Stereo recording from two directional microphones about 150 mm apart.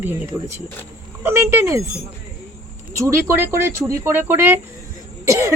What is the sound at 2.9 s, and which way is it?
Speech, 20° right (ahead or behind).